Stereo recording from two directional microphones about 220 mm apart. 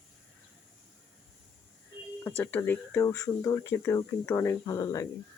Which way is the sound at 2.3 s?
10° left (ahead or behind).